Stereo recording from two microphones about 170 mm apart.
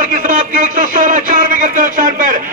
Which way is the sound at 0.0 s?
50° right (ahead or behind).